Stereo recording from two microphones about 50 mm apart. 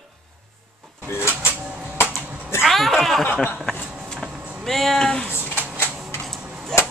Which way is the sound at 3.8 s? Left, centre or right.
Centre.